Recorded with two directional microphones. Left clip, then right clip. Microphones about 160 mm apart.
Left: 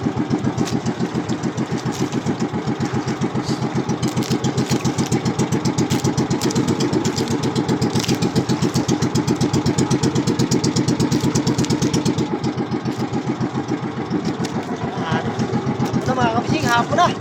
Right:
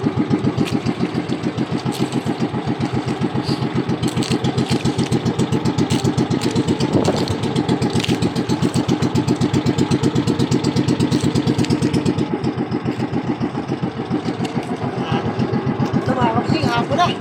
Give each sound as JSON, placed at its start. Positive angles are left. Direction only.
{"t": 16.6, "sound": "vehicle", "side_deg": 25}